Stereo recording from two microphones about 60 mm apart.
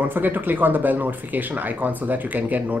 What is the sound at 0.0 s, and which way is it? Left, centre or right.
Speech, right.